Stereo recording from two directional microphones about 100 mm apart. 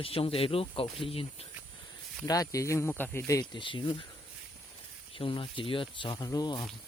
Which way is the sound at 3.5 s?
55° left (ahead or behind).